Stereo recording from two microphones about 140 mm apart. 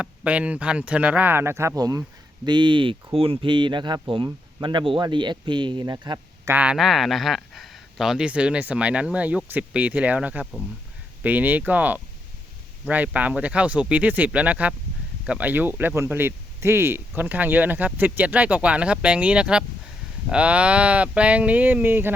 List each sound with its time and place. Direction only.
0.0 s speech: 10° right (ahead or behind); by 6.5 s 25° right (ahead or behind)
6.5 s speech: 10° right (ahead or behind)